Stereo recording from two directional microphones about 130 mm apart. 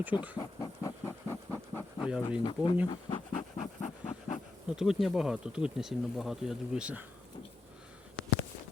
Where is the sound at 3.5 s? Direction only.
55° left (ahead or behind).